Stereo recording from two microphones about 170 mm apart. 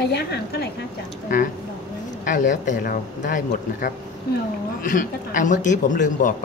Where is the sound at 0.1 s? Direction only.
70° left (ahead or behind).